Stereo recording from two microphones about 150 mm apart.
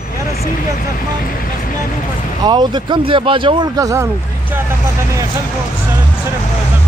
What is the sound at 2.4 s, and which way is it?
Speech, 30° right (ahead or behind).